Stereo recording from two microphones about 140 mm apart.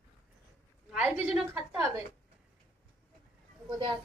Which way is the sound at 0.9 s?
10° right (ahead or behind).